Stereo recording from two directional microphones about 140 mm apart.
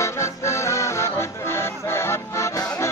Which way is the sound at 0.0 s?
20° left (ahead or behind).